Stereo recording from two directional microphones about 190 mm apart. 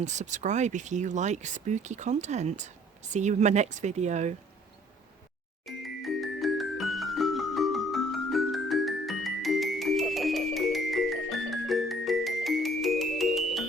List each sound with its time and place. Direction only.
0.0 s speech: 40° right (ahead or behind)
5.6 s music: centre (ahead or behind)